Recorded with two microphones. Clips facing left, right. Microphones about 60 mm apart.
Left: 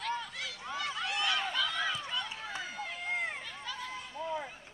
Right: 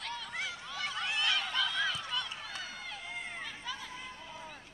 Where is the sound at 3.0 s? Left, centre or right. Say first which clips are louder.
Left 10 dB; left.